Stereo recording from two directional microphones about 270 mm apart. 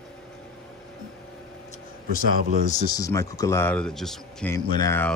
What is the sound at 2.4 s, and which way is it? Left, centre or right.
Speech, right.